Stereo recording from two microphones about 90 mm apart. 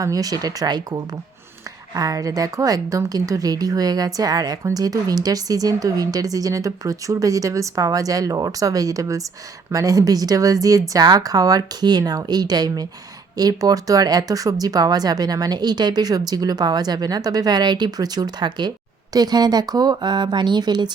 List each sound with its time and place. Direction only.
0.0 s a woman's voice: 40° right (ahead or behind)